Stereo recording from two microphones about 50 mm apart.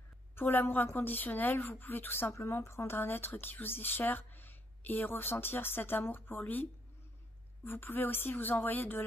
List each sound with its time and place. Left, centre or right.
0.4 s speech: left
2.5 s speech: left